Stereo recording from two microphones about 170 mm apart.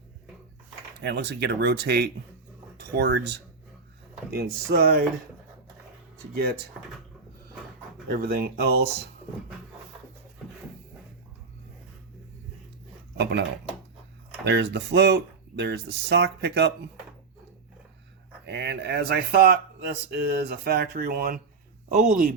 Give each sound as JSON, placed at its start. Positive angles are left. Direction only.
{"t": 1.0, "sound": "speech", "side_deg": -80}
{"t": 4.3, "sound": "speech", "side_deg": -65}
{"t": 6.3, "sound": "speech", "side_deg": -60}
{"t": 8.1, "sound": "speech", "side_deg": -60}
{"t": 14.4, "sound": "speech", "side_deg": -90}
{"t": 18.4, "sound": "speech", "side_deg": -90}